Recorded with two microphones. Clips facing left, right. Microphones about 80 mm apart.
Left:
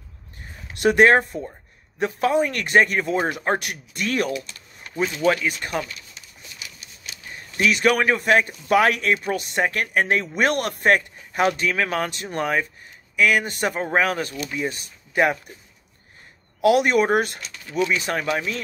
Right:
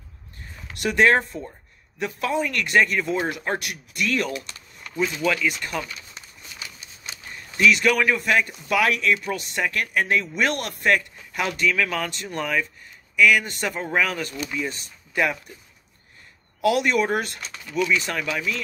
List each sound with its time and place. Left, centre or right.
0.7 s a man's voice: left
6.1 s a sound: right
7.7 s a man's voice: left
16.6 s speech: left
18.1 s a man's voice: left